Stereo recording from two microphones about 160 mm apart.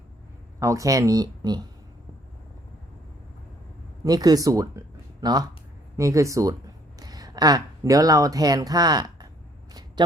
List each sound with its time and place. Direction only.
0.6 s speech: 20° right (ahead or behind)
4.0 s speech: 25° right (ahead or behind)